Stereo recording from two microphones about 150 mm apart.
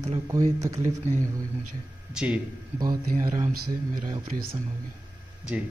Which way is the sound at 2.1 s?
10° right (ahead or behind).